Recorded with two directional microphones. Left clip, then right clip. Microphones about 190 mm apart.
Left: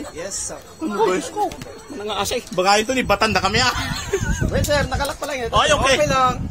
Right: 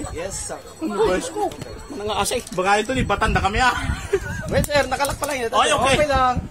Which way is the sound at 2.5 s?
55° left (ahead or behind).